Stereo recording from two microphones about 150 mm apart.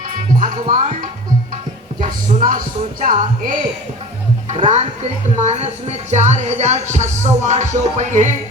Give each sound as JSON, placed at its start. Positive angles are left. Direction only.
{"t": 0.3, "sound": "speech", "side_deg": -60}
{"t": 2.0, "sound": "speech", "side_deg": -65}
{"t": 4.4, "sound": "a woman's voice", "side_deg": -50}